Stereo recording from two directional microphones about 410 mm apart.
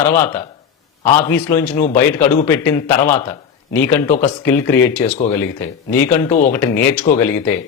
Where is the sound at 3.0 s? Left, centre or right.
Centre.